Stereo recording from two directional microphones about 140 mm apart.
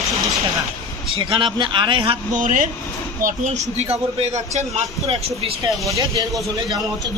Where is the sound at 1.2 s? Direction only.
35° right (ahead or behind).